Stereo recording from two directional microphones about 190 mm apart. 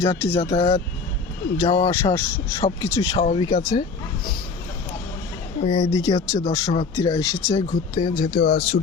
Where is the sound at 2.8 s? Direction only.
15° left (ahead or behind).